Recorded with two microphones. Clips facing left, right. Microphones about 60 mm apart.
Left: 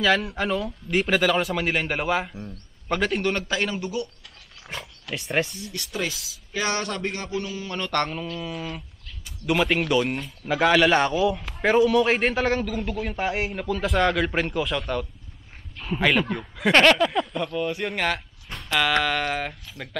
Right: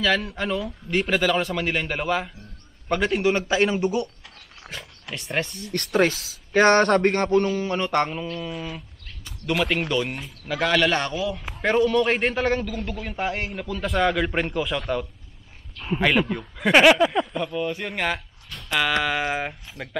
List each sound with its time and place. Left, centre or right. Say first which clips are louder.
0.0 s a man's voice: left 1 dB; centre
3.4 s a man's voice: right 6 dB; centre
5.1 s a man's voice: left 2 dB; centre
5.7 s speech: right 9 dB; right
7.6 s a man's voice: right 3 dB; right; by 10.3 s centre
10.4 s a man's voice: left 2 dB; centre
16.8 s a man's voice: right 2 dB; centre